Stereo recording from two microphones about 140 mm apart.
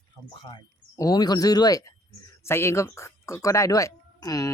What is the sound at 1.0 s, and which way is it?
Speech, 25° left (ahead or behind).